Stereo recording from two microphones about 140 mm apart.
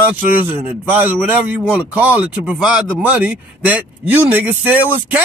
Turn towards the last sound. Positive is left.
turn(degrees=-10)  # may be behind; listen again after turning